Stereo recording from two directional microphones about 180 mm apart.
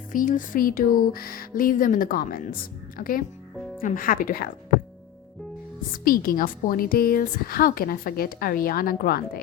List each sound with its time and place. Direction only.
0.1 s a woman's voice: 45° left (ahead or behind)
6.1 s a woman's voice: 50° left (ahead or behind)